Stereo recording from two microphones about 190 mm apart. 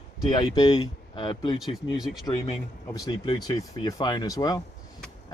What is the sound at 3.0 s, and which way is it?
Speech, 20° left (ahead or behind).